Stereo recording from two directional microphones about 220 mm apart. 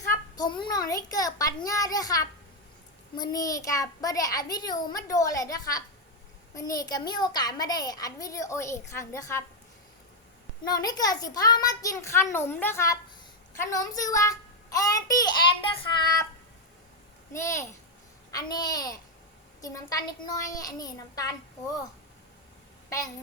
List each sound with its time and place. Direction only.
0.3 s a child's voice: 20° left (ahead or behind)
10.6 s a child's voice: 15° left (ahead or behind)
17.3 s a child's voice: 15° left (ahead or behind)
22.9 s a woman's voice: 15° left (ahead or behind)